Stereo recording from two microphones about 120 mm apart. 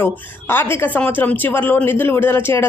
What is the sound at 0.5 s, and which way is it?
Speech, 20° left (ahead or behind).